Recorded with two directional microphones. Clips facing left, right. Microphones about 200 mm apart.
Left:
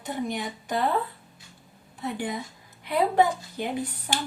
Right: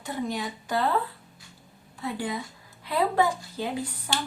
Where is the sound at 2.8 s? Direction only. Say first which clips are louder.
Left 2 dB; 20° left (ahead or behind).